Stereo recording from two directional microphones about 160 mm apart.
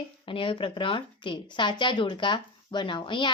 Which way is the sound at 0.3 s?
35° left (ahead or behind).